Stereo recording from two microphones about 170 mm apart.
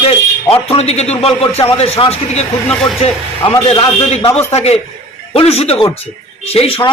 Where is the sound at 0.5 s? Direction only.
35° left (ahead or behind).